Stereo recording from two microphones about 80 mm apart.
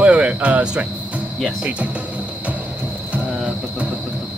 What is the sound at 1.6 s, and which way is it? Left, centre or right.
Speech, centre.